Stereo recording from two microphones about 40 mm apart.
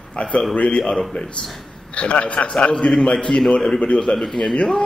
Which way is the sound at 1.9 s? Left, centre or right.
Left.